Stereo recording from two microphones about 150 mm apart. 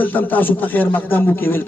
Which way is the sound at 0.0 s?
10° left (ahead or behind).